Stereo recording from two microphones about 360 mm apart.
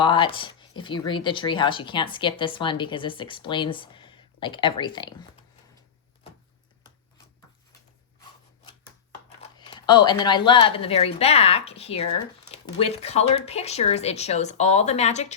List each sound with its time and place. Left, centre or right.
0.0 s speech: centre
9.4 s speech: centre